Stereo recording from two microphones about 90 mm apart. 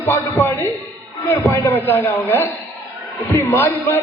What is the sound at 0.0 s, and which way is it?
Speech, 25° left (ahead or behind).